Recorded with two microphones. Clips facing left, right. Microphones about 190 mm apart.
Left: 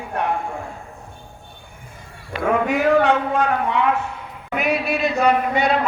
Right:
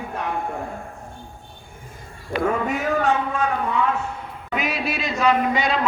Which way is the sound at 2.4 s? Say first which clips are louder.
Left 6 dB; 65° left (ahead or behind).